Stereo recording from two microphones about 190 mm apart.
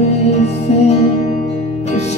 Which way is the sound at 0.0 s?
35° left (ahead or behind).